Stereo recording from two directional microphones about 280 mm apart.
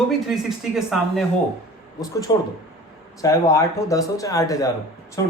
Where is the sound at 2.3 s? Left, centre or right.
Centre.